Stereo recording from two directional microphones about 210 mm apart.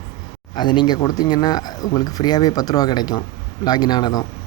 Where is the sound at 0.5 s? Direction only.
20° left (ahead or behind).